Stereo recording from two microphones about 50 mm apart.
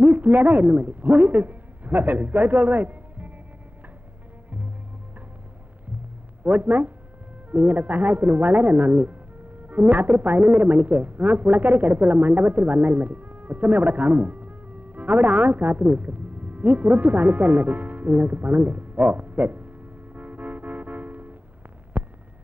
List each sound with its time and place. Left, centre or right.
0.0 s a woman's voice: right
6.4 s a woman's voice: right
20.2 s music: right
21.9 s a sound: right